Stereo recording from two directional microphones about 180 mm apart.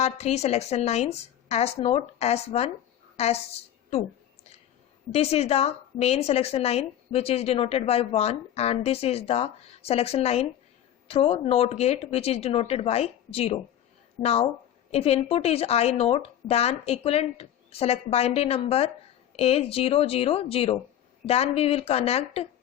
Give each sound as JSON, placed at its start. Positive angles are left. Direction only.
{"t": 0.0, "sound": "a woman's voice", "side_deg": 35}
{"t": 5.1, "sound": "a woman's voice", "side_deg": 35}